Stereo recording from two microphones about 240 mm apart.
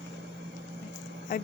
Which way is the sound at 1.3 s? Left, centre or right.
Left.